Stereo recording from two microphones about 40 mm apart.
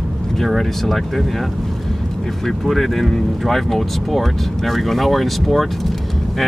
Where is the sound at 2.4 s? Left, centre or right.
Centre.